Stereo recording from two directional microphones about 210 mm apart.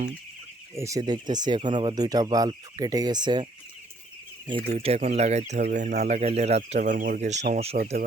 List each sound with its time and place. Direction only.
0.8 s speech: 15° right (ahead or behind)
4.4 s speech: 25° right (ahead or behind)